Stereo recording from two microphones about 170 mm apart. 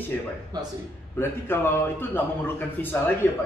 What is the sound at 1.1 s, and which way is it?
A man's voice, 15° left (ahead or behind).